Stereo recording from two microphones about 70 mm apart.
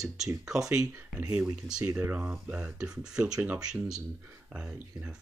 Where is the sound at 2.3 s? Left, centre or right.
Centre.